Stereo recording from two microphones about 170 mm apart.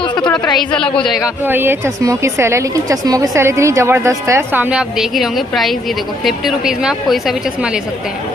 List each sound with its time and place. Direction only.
0.0 s a sound: 25° left (ahead or behind)
0.7 s a woman's voice: 5° left (ahead or behind)
1.4 s a woman's voice: 10° right (ahead or behind)